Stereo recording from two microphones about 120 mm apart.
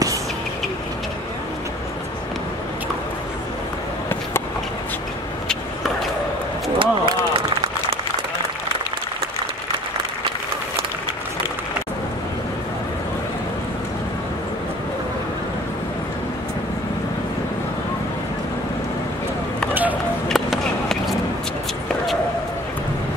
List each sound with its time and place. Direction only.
6.8 s run: 45° right (ahead or behind)
19.7 s chop: 15° right (ahead or behind)
20.2 s skateboard: centre (ahead or behind)